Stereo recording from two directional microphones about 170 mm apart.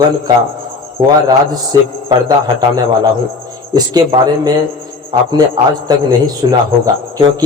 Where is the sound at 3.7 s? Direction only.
25° right (ahead or behind).